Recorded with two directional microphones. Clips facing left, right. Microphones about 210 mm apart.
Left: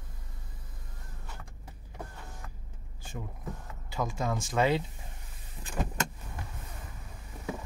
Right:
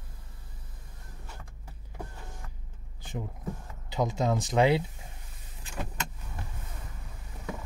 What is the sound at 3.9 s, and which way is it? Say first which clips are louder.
Speech: right 4 dB; 20° right (ahead or behind).